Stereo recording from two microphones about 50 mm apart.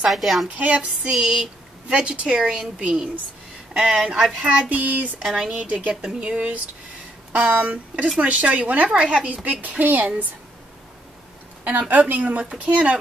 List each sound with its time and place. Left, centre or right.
0.1 s a woman's voice: centre
0.6 s a woman's voice: right
1.1 s a woman's voice: centre
4.6 s child singing: right
5.2 s speech: centre
5.5 s a woman's voice: right
11.9 s a woman's voice: right